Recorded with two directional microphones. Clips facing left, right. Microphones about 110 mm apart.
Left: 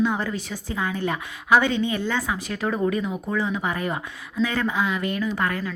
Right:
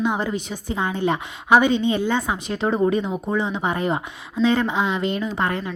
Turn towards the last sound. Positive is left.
turn(degrees=-25)  # may be behind; listen again after turning